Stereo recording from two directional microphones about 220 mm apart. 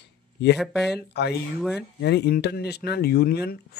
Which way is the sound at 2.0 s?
50° left (ahead or behind).